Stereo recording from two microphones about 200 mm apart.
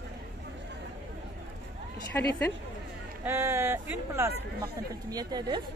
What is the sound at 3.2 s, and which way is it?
Speech, 10° right (ahead or behind).